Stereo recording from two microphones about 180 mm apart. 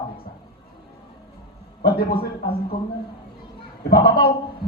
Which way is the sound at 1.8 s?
55° left (ahead or behind).